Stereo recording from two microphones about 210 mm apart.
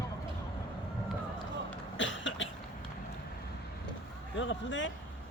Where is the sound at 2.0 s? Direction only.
60° left (ahead or behind).